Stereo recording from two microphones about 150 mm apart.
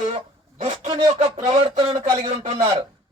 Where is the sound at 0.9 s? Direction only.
35° right (ahead or behind).